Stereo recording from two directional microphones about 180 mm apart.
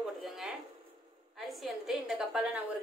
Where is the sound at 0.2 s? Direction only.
Centre (ahead or behind).